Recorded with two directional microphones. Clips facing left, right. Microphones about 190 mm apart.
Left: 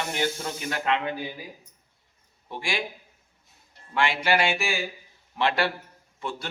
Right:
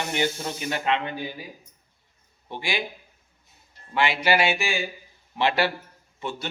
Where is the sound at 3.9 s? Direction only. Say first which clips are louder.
Right 2 dB; 5° right (ahead or behind).